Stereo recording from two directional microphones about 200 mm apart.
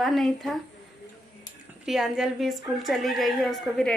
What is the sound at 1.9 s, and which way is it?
A woman's voice, centre (ahead or behind).